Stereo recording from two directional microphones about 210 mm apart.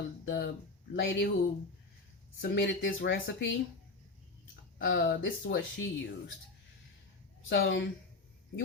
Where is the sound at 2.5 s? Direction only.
60° left (ahead or behind).